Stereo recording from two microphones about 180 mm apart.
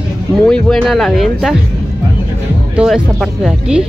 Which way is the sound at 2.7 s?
5° right (ahead or behind).